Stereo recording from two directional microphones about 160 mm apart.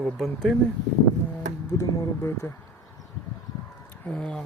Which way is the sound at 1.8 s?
20° left (ahead or behind).